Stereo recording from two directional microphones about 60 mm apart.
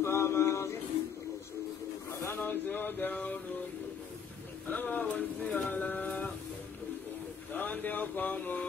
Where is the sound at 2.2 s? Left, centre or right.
Left.